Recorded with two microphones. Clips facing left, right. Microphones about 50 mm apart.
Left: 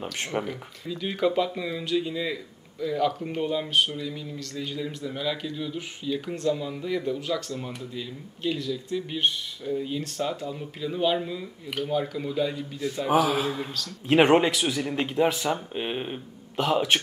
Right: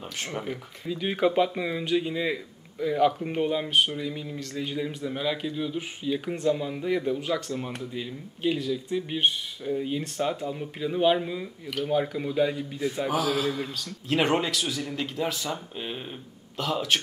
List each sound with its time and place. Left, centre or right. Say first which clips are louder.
0.0 s speech: left 4 dB; centre
0.5 s speech: right 1 dB; centre
13.3 s speech: even; centre
14.0 s a man's voice: left 6 dB; left